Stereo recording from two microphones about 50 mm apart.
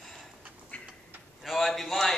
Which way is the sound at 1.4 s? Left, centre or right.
Centre.